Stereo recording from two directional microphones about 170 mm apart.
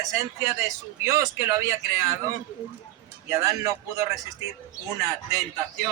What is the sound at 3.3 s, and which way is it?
Speech, 20° right (ahead or behind).